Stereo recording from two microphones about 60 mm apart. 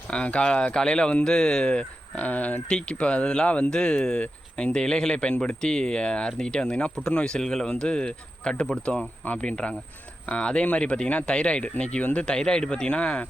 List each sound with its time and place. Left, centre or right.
0.1 s speech: centre
2.6 s speech: centre